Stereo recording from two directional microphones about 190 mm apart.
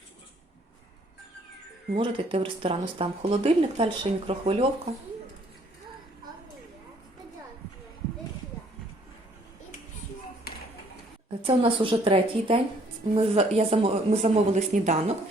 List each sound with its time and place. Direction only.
2.0 s speech: 25° right (ahead or behind)
11.4 s speech: 30° right (ahead or behind)